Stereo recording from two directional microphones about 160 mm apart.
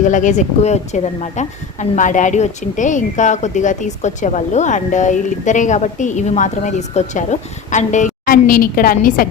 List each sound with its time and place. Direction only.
0.0 s a woman's voice: 50° left (ahead or behind)